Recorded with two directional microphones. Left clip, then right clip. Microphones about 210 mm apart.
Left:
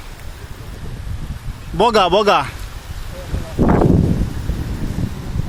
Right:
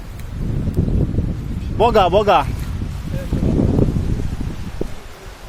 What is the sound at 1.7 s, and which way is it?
Speech, 15° left (ahead or behind).